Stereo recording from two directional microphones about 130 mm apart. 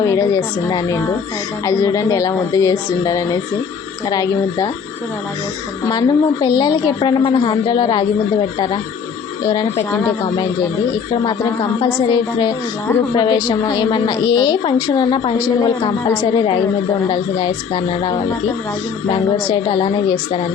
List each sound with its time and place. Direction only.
0.0 s speech: 25° left (ahead or behind)
5.8 s a woman's voice: 30° left (ahead or behind)
19.5 s a woman's voice: 35° left (ahead or behind)